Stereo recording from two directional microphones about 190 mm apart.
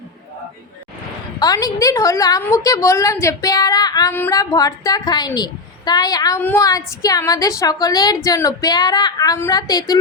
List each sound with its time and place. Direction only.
1.4 s a woman's voice: 20° left (ahead or behind)